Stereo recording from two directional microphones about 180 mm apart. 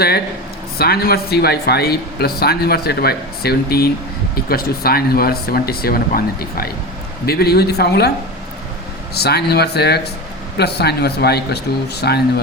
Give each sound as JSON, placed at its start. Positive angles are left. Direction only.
{"t": 0.8, "sound": "speech", "side_deg": 60}
{"t": 9.1, "sound": "speech", "side_deg": 65}